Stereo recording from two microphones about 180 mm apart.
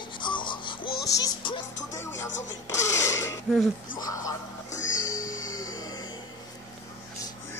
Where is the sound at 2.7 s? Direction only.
15° left (ahead or behind).